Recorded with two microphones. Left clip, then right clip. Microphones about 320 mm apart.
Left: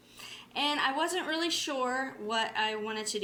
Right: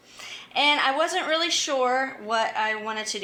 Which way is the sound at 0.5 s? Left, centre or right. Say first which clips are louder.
Right 9 dB; left.